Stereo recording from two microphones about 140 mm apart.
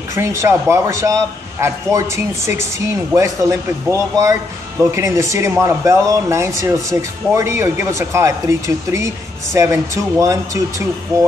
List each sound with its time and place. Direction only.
0.1 s speech: 20° right (ahead or behind)